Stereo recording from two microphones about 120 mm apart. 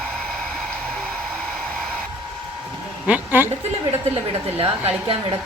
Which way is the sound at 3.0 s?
15° right (ahead or behind).